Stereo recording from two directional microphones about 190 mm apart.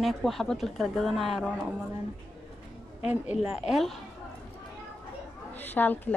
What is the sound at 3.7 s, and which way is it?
Speech, centre (ahead or behind).